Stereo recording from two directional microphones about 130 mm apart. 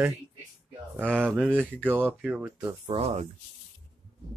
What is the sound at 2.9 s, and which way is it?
Speech, 55° right (ahead or behind).